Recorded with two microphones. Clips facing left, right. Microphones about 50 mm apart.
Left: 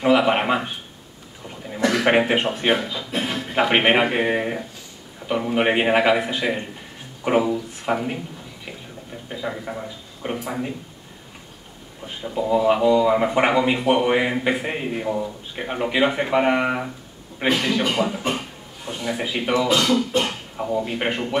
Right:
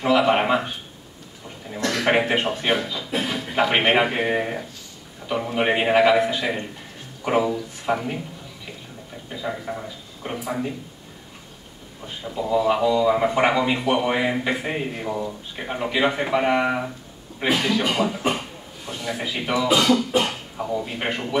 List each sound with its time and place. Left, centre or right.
0.0 s speech: centre
1.7 s a sound: centre
2.4 s speech: centre
3.1 s music: centre
3.5 s speech: centre
9.3 s speech: centre
12.2 s a man's voice: centre
19.7 s beatboxing: centre
20.1 s speech: centre
20.5 s speech: centre